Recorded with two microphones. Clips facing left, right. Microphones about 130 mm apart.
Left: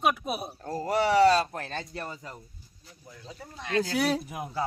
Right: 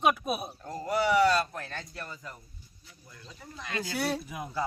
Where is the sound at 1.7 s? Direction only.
65° left (ahead or behind).